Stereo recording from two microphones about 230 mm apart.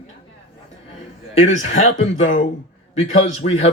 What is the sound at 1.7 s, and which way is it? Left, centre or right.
Speech, left.